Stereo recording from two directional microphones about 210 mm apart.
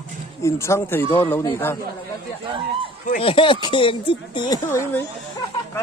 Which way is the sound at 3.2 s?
25° left (ahead or behind).